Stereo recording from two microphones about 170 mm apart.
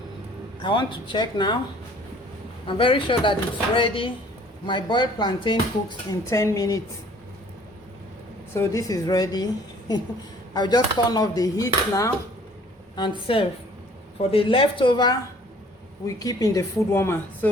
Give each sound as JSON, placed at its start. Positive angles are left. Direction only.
{"t": 0.6, "sound": "speech", "side_deg": 30}
{"t": 2.6, "sound": "a woman's voice", "side_deg": 30}
{"t": 8.5, "sound": "speech", "side_deg": 15}
{"t": 10.5, "sound": "speech", "side_deg": 25}
{"t": 13.0, "sound": "a woman's voice", "side_deg": 30}